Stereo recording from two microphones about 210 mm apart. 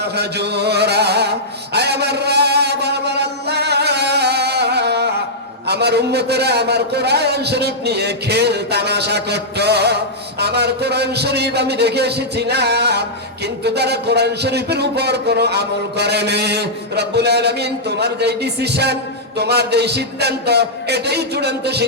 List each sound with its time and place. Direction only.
0.0 s a man's voice: 50° right (ahead or behind)
1.7 s mantra: 50° right (ahead or behind)
5.6 s a man's voice: 50° right (ahead or behind)